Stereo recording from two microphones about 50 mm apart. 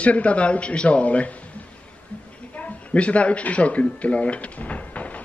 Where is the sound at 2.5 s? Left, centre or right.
Left.